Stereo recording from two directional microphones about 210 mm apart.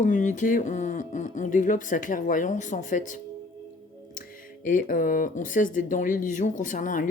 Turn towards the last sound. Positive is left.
turn(degrees=40)  # may be behind; listen again after turning